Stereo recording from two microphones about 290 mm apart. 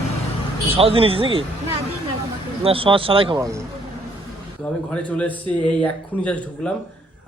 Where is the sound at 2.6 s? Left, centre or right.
Centre.